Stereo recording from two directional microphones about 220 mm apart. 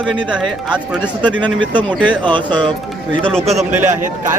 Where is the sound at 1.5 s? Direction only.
20° right (ahead or behind).